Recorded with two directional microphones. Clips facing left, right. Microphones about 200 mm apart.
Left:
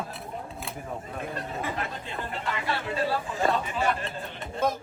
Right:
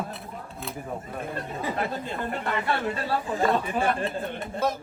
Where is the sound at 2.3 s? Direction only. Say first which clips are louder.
Right 3 dB; 55° right (ahead or behind).